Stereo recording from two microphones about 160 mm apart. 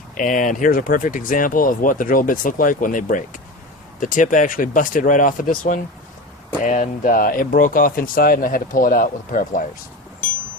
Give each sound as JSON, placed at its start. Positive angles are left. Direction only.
{"t": 0.2, "sound": "speech", "side_deg": 55}